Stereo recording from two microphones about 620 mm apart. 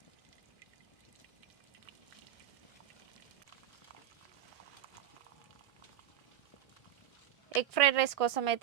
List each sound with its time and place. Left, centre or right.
7.5 s a woman's voice: right